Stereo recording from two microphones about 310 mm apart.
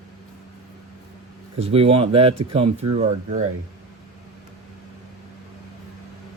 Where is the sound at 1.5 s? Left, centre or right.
Centre.